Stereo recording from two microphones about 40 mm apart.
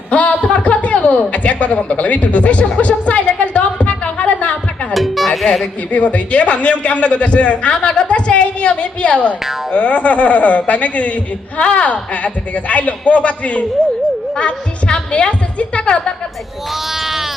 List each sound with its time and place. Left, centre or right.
0.1 s a sound: left
4.9 s music: centre
5.9 s a woman's voice: left
16.7 s sheep: centre